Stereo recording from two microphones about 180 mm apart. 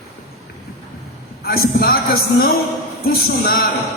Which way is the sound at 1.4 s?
55° left (ahead or behind).